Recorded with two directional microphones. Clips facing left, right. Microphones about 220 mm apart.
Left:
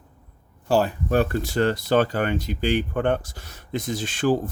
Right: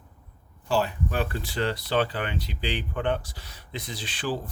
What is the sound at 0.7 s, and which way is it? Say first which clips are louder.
Speech: left 6 dB; 45° left (ahead or behind).